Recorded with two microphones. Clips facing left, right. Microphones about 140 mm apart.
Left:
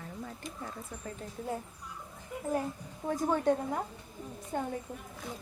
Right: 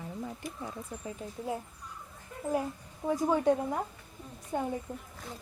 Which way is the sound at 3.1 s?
5° right (ahead or behind).